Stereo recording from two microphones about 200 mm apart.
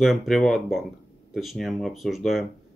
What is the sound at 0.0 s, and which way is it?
Speech, centre (ahead or behind).